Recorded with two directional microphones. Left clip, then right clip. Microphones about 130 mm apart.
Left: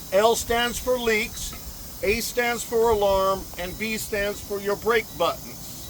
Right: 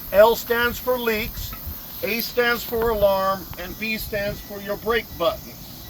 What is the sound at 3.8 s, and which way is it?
Speech, 15° left (ahead or behind).